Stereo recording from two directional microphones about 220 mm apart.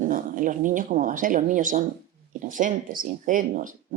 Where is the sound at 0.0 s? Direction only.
35° right (ahead or behind).